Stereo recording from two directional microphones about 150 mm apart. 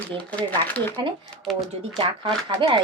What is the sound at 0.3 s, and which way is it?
Speech, 10° left (ahead or behind).